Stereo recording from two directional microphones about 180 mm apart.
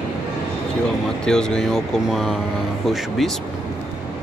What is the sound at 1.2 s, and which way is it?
Speech, 5° left (ahead or behind).